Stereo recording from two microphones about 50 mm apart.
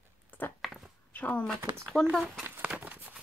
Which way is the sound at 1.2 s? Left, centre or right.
Left.